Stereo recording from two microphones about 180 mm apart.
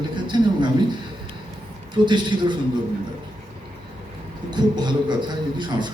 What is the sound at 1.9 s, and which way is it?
Speech, 25° right (ahead or behind).